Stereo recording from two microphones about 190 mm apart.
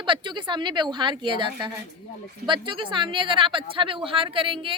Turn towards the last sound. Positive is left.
turn(degrees=-25)  # may be behind; listen again after turning